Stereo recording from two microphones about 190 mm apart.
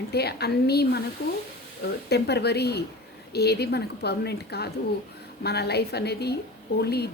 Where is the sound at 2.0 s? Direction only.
60° left (ahead or behind).